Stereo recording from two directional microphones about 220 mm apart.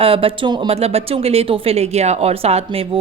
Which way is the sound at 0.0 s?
25° right (ahead or behind).